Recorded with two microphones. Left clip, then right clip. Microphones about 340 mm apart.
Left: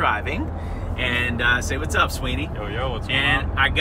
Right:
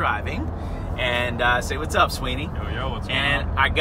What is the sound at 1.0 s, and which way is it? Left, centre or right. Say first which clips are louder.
Speech: even; centre.